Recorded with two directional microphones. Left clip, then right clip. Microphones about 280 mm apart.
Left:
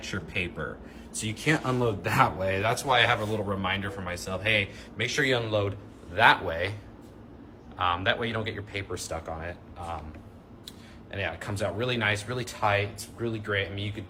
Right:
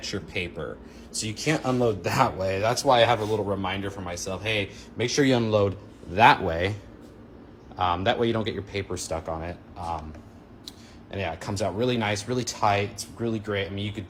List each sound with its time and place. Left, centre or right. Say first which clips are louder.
0.0 s speech: right 1 dB; centre; by 6.7 s right
7.8 s speech: right 3 dB; centre